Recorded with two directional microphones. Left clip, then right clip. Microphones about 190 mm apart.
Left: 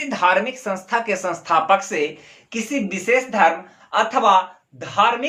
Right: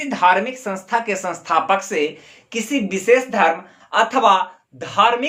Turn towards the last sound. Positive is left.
turn(degrees=-35)  # may be behind; listen again after turning